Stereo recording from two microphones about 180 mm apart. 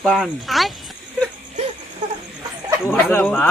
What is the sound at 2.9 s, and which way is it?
Speech, 10° left (ahead or behind).